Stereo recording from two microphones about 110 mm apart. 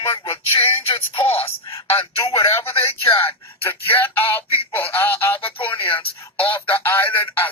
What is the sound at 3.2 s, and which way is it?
Speech, 20° left (ahead or behind).